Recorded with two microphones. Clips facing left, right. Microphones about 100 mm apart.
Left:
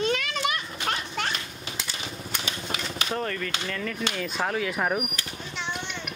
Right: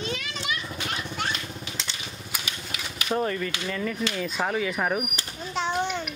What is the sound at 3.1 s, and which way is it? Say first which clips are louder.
Speech: right 5 dB; 10° right (ahead or behind).